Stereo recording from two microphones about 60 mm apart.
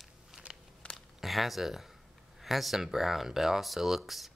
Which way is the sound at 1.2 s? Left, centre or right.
Centre.